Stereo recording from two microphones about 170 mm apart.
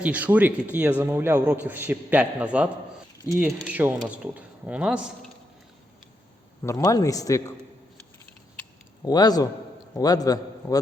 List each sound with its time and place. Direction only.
0.0 s a man's voice: 10° right (ahead or behind)
6.6 s a man's voice: 20° left (ahead or behind)
9.0 s a man's voice: 25° left (ahead or behind)